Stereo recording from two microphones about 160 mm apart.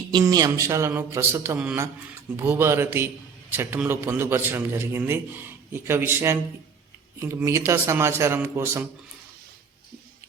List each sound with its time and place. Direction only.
0.1 s a man's voice: 25° right (ahead or behind)